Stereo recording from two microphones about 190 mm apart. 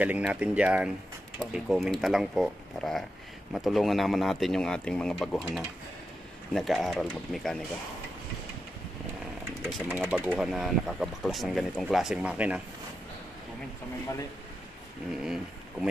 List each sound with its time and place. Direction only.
0.0 s speech: 10° right (ahead or behind)
9.8 s speech: 10° right (ahead or behind)
15.2 s speech: 5° right (ahead or behind)